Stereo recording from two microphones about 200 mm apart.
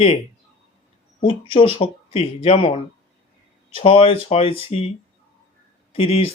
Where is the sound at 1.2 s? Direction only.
25° left (ahead or behind).